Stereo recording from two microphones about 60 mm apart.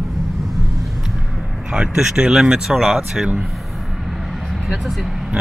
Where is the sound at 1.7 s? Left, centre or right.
Centre.